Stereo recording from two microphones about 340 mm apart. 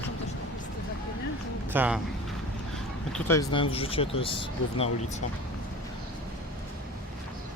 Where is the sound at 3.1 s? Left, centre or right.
Centre.